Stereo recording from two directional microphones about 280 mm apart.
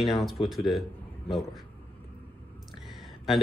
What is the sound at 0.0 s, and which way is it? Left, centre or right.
Speech, centre.